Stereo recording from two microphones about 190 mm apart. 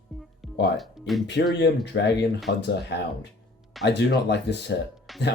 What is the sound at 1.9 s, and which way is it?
Speech, 65° left (ahead or behind).